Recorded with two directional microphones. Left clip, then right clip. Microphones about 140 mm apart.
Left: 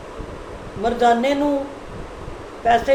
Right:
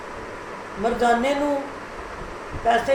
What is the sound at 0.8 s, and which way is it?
Speech, 15° left (ahead or behind).